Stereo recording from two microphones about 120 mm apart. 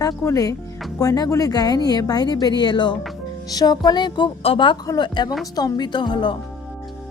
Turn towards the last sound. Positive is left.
turn(degrees=40)  # may be behind; listen again after turning